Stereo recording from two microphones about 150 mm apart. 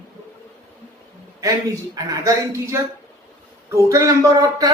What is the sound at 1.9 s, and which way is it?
A woman's voice, 20° right (ahead or behind).